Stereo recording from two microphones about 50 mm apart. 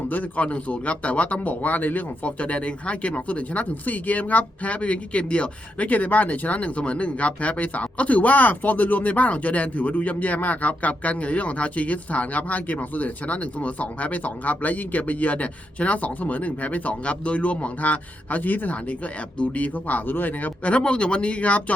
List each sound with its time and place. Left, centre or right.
0.1 s speech: left
20.7 s speech: left